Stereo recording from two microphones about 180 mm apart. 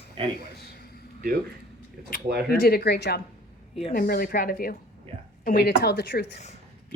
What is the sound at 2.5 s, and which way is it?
Speech, 60° left (ahead or behind).